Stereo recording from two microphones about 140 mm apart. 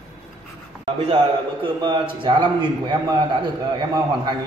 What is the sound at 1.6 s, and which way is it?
A man's voice, 35° right (ahead or behind).